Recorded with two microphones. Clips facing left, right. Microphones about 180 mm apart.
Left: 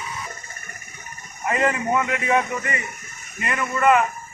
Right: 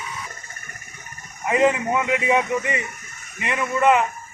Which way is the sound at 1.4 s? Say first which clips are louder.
Right 3 dB; 10° right (ahead or behind).